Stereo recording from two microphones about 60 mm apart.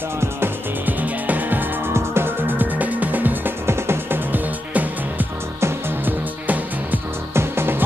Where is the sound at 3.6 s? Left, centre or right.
Right.